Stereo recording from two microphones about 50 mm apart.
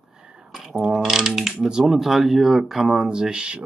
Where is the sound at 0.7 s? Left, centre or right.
Centre.